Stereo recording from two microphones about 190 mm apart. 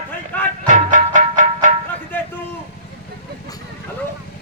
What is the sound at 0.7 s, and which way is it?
Music, 40° right (ahead or behind).